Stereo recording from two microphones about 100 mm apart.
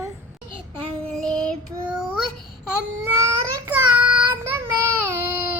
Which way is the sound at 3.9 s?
10° right (ahead or behind).